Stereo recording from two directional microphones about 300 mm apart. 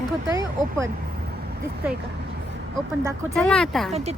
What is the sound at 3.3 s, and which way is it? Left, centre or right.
Speech, centre.